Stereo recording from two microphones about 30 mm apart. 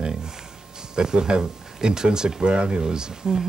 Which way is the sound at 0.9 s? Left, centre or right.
Right.